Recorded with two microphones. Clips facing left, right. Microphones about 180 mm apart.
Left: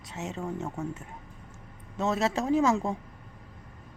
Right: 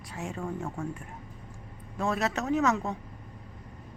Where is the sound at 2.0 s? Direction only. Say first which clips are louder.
Left 2 dB; 25° left (ahead or behind).